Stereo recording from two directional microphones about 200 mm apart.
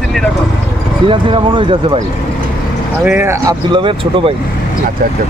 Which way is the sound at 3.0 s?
10° right (ahead or behind).